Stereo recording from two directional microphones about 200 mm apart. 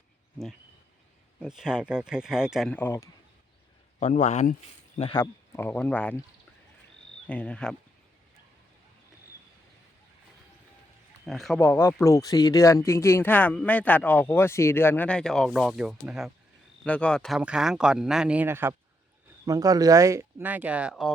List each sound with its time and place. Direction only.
1.4 s speech: 5° right (ahead or behind); by 3.1 s 10° left (ahead or behind)
4.0 s speech: 35° left (ahead or behind)
4.9 s speech: 25° left (ahead or behind); by 6.1 s 10° left (ahead or behind)
7.3 s speech: 5° left (ahead or behind)
11.3 s speech: centre (ahead or behind)